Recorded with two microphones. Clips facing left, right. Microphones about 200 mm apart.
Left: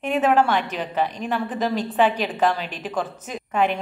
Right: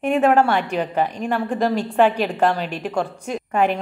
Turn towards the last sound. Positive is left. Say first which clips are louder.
# right 2 dB
turn(degrees=-40)  # may be behind; listen again after turning